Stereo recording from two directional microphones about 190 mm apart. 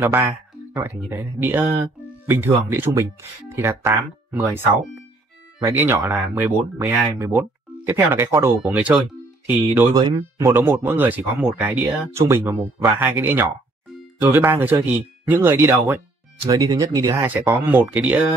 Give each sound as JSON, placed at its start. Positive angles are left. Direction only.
{"t": 0.0, "sound": "speech", "side_deg": -15}
{"t": 5.7, "sound": "speech", "side_deg": -10}
{"t": 8.5, "sound": "speech", "side_deg": -5}